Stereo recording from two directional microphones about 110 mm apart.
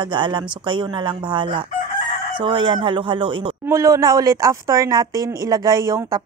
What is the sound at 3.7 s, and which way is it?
Speech, 25° right (ahead or behind).